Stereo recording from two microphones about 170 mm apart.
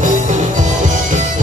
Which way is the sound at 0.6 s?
45° right (ahead or behind).